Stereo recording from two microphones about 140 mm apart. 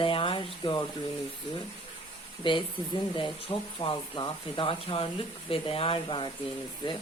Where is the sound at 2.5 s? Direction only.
35° left (ahead or behind).